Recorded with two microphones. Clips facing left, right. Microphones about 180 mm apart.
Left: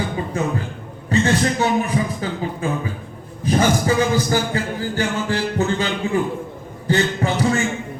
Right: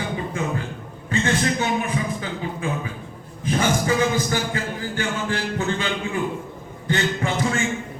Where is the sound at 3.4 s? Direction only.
35° left (ahead or behind).